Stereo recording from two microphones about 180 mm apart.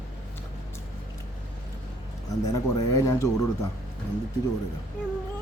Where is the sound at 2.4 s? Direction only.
20° left (ahead or behind).